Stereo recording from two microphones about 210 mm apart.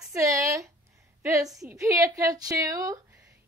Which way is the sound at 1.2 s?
15° right (ahead or behind).